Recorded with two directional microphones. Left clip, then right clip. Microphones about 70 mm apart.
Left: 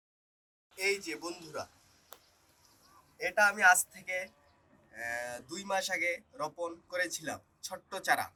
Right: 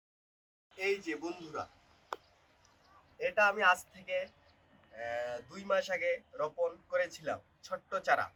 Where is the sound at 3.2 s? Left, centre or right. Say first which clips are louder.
Left 3 dB; right.